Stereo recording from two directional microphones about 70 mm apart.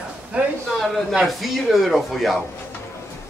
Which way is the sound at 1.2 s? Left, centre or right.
Centre.